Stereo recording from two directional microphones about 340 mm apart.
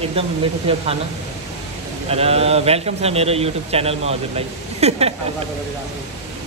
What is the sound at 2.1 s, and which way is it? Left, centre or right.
A man's voice, centre.